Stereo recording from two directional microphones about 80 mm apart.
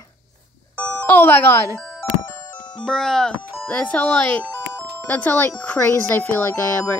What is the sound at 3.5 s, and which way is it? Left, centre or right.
Speech, centre.